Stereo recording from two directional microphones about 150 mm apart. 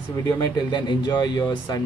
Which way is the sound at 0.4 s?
30° left (ahead or behind).